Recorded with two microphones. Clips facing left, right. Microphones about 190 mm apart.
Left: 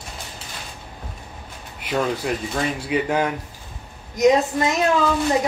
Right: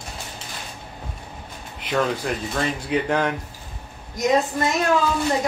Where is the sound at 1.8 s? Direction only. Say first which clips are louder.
Even; 5° left (ahead or behind).